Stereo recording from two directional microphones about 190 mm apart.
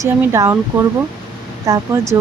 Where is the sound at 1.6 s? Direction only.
15° right (ahead or behind).